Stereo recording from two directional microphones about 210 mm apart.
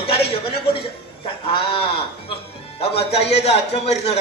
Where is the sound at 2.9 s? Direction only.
30° left (ahead or behind).